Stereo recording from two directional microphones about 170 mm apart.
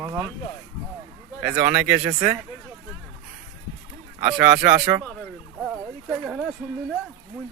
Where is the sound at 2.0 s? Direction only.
20° right (ahead or behind).